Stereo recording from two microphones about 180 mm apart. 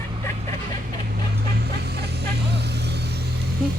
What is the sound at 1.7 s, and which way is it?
Vehicle, 65° right (ahead or behind).